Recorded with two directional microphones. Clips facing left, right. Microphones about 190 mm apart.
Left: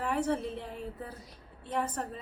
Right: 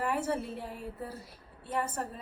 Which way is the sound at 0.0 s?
5° right (ahead or behind).